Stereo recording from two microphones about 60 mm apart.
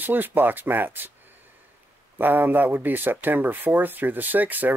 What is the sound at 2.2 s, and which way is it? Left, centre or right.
Speech, right.